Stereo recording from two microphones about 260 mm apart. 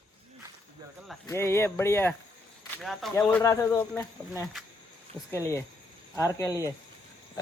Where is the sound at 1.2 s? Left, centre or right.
Centre.